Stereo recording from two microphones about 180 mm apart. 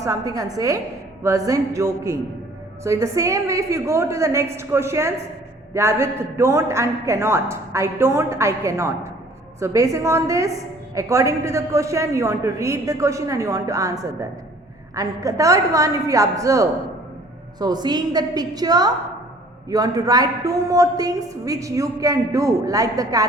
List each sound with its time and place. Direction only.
0.0 s a woman's voice: 20° right (ahead or behind)